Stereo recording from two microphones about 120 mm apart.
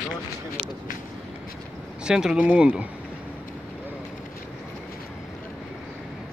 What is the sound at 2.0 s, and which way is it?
Speech, 5° right (ahead or behind).